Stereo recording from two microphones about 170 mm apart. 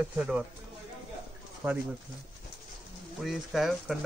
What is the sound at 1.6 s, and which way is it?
Speech, 15° right (ahead or behind).